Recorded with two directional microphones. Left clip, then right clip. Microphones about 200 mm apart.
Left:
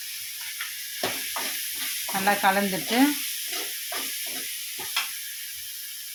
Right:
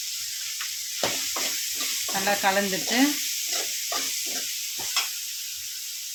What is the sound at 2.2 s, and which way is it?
Speech, 10° left (ahead or behind).